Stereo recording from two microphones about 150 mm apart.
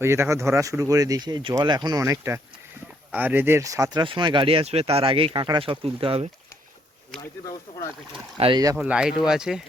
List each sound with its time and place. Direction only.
0.0 s speech: 15° right (ahead or behind); by 6.2 s 40° right (ahead or behind)
7.7 s speech: 35° left (ahead or behind)
8.4 s speech: 45° right (ahead or behind)
8.7 s speech: 5° right (ahead or behind)